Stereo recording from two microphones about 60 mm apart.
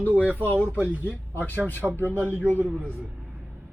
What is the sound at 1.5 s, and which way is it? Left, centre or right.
Speech, left.